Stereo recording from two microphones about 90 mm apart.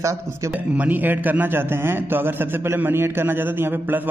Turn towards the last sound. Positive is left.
turn(degrees=-25)  # may be behind; listen again after turning